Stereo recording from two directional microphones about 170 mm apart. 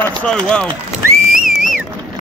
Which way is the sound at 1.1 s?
55° right (ahead or behind).